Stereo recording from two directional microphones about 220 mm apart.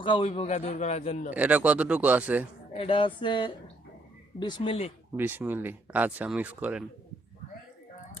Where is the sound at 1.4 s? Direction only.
5° right (ahead or behind).